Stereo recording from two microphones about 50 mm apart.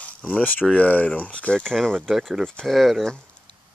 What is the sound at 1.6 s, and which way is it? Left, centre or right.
Speech, centre.